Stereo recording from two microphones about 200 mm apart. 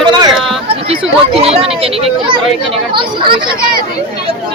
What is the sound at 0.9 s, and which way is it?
Speech, 30° right (ahead or behind).